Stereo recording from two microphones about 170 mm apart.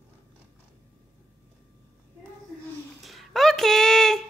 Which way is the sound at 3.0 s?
Centre (ahead or behind).